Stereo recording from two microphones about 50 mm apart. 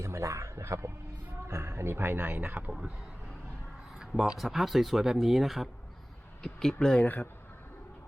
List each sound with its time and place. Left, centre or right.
0.0 s a sound: right
1.5 s speech: right
4.2 s speech: centre
6.4 s speech: centre
7.0 s speech: left